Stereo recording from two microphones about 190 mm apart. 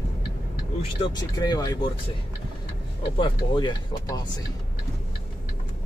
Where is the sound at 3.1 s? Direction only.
25° left (ahead or behind).